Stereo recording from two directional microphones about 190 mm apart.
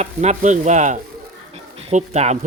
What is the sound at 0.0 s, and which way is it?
Speech, 35° right (ahead or behind).